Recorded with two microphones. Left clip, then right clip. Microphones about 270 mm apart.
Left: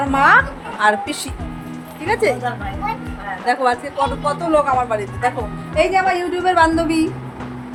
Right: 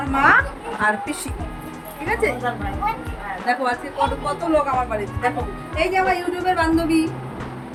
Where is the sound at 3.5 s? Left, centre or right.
Centre.